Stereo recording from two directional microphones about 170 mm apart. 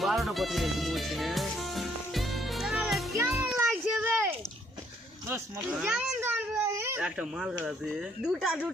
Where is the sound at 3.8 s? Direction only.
10° right (ahead or behind).